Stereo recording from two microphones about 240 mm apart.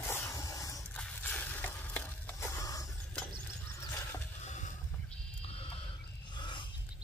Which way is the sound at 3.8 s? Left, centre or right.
Centre.